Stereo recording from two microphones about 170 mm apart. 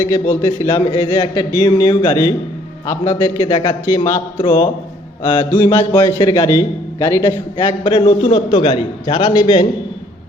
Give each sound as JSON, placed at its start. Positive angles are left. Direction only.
{"t": 0.3, "sound": "a man's voice", "side_deg": 20}